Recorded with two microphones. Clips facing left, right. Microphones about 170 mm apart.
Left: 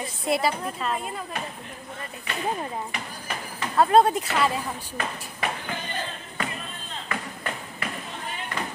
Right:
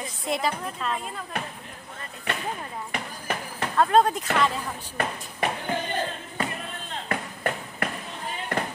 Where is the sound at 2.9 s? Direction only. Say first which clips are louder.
Right 3 dB; 55° right (ahead or behind).